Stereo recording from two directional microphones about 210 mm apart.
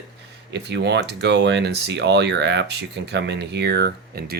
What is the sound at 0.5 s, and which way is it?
Speech, 55° right (ahead or behind).